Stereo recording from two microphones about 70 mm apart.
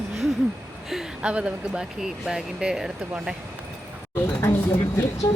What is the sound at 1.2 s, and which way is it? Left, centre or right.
Speech, centre.